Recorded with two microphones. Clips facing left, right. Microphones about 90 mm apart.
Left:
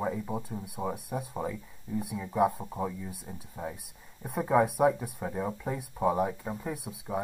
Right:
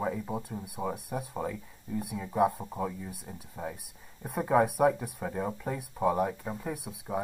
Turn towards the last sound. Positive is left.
turn(degrees=0)  # may be behind; listen again after turning